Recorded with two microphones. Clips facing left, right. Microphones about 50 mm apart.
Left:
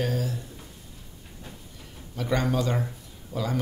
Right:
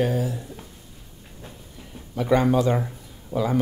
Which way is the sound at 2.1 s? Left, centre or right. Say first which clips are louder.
Right 7 dB; centre.